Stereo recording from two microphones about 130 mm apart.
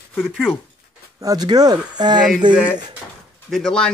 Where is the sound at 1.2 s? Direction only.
30° right (ahead or behind).